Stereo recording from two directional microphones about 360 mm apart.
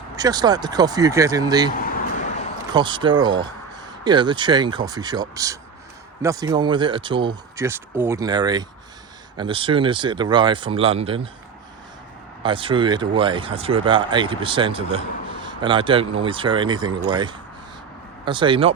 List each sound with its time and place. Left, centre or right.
0.2 s speech: centre
1.8 s a sound: left
2.7 s speech: centre
12.4 s speech: centre